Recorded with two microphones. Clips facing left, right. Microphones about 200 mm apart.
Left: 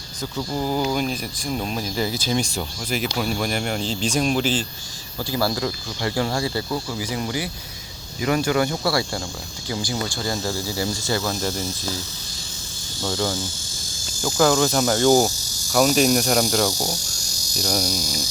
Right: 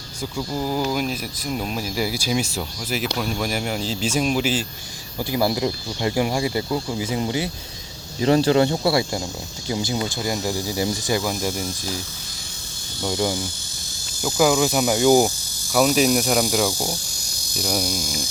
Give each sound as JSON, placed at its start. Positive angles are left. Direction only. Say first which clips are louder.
{"t": 0.5, "sound": "speech", "louder": "left 1 dB", "side_deg": 0}
{"t": 5.2, "sound": "speech", "louder": "right 2 dB", "side_deg": -20}
{"t": 13.0, "sound": "speech", "louder": "right 2 dB", "side_deg": -15}
{"t": 16.7, "sound": "speech", "louder": "even", "side_deg": 15}
{"t": 17.6, "sound": "speech", "louder": "even", "side_deg": -5}
{"t": 17.9, "sound": "speech", "louder": "even", "side_deg": -50}